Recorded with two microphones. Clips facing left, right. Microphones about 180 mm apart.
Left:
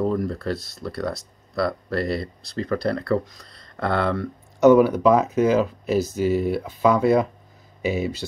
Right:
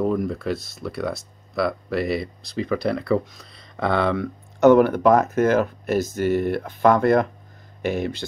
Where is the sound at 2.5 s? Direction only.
5° right (ahead or behind).